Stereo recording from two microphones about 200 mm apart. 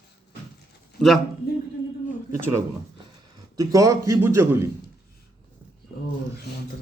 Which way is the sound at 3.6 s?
15° right (ahead or behind).